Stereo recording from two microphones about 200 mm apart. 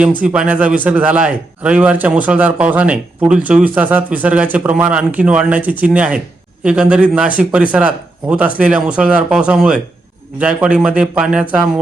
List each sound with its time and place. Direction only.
0.2 s a man's voice: 5° right (ahead or behind)